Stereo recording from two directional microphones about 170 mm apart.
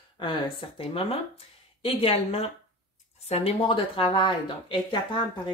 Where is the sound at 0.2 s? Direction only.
30° left (ahead or behind).